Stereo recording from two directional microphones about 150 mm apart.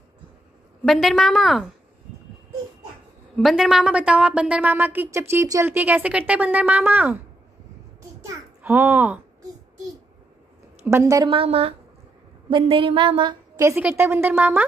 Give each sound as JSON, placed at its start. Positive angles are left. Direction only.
{"t": 0.8, "sound": "a woman's voice", "side_deg": 0}
{"t": 3.3, "sound": "a woman's voice", "side_deg": 0}
{"t": 8.2, "sound": "a sound", "side_deg": -20}
{"t": 10.8, "sound": "a woman's voice", "side_deg": -15}
{"t": 11.2, "sound": "a woman's voice", "side_deg": -40}
{"t": 13.7, "sound": "a woman's voice", "side_deg": -15}